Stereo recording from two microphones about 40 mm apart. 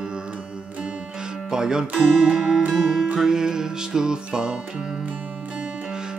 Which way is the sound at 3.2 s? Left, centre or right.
Centre.